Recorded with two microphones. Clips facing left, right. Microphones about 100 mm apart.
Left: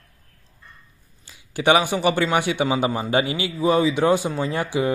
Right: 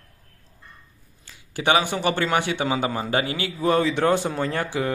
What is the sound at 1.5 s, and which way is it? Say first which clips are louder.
A man's voice: left 3 dB; 20° left (ahead or behind).